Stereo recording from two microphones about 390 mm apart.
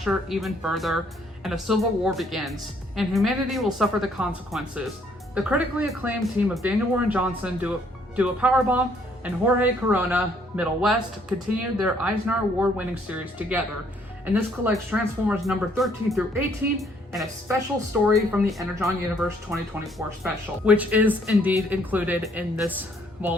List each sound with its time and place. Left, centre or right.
0.0 s speech: centre